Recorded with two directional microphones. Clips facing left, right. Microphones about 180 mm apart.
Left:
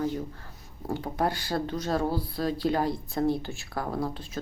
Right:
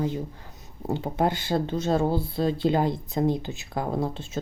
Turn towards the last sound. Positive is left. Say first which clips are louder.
# right 3 dB
turn(degrees=-25)  # may be behind; listen again after turning